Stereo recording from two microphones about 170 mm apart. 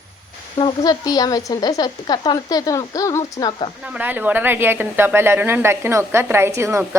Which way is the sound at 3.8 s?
10° right (ahead or behind).